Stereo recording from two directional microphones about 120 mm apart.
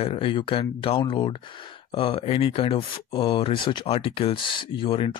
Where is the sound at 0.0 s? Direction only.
50° left (ahead or behind).